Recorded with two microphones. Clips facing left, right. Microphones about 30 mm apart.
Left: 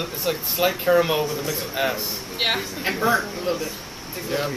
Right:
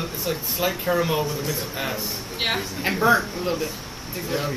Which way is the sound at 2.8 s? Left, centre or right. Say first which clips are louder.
Right 4 dB; centre.